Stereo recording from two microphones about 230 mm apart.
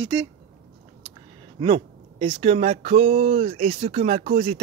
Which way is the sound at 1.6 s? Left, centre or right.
Right.